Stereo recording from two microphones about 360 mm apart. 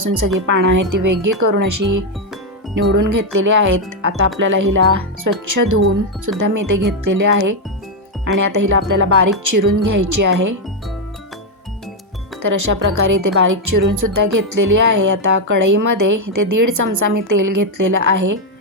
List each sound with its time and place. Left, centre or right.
0.4 s speech: right
12.4 s speech: right